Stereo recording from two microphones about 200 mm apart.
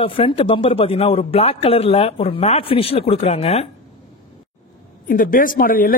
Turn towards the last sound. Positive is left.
turn(degrees=45)  # may be behind; listen again after turning